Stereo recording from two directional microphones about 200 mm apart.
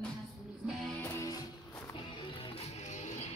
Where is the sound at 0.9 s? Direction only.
15° left (ahead or behind).